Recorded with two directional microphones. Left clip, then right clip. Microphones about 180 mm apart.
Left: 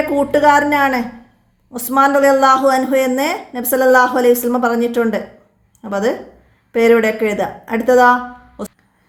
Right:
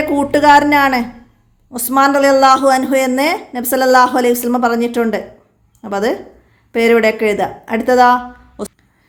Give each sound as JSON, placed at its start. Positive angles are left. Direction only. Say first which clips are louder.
{"t": 0.1, "sound": "a woman's voice", "louder": "right 3 dB", "side_deg": -25}